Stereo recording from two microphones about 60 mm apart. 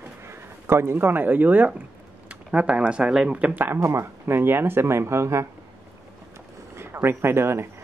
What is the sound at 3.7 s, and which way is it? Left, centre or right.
Speech, right.